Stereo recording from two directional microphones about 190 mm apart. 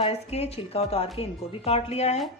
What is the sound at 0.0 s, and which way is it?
A woman's voice, 35° left (ahead or behind).